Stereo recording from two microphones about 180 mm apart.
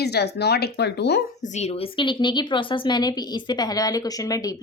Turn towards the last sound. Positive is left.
turn(degrees=20)  # may be behind; listen again after turning